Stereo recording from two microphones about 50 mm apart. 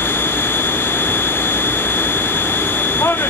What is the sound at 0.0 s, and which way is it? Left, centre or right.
Vehicle, left.